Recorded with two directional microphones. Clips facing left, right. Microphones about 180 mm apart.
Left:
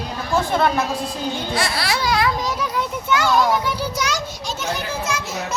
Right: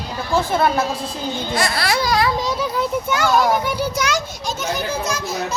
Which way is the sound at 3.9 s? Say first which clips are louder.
Right 3 dB; 55° right (ahead or behind).